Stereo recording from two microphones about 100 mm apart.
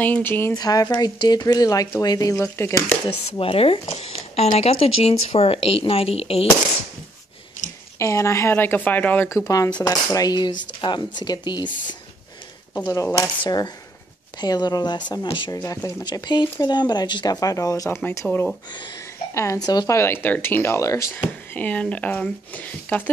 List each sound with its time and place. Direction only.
0.0 s speech: 20° left (ahead or behind)
0.6 s speech: 40° left (ahead or behind)
2.3 s speech: 25° left (ahead or behind)
3.3 s speech: 70° left (ahead or behind)
8.0 s speech: 30° left (ahead or behind)
9.4 s speech: 35° left (ahead or behind)
12.8 s speech: 30° left (ahead or behind)
14.4 s speech: 40° left (ahead or behind)
15.5 s speech: 35° left (ahead or behind)
21.3 s speech: 15° left (ahead or behind)